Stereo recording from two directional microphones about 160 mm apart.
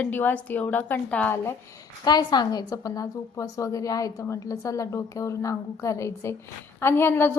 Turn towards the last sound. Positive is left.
turn(degrees=15)  # may be behind; listen again after turning